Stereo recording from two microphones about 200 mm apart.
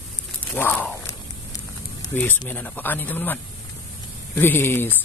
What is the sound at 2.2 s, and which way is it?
Speech, 10° left (ahead or behind).